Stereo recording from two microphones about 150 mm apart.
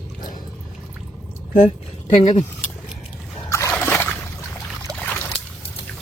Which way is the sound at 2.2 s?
55° left (ahead or behind).